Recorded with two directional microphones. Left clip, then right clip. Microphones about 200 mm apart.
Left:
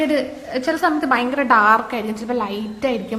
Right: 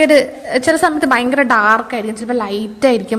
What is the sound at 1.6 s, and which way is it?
A woman's voice, 15° right (ahead or behind).